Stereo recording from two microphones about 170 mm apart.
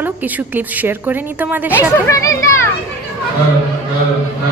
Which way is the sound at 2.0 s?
20° left (ahead or behind).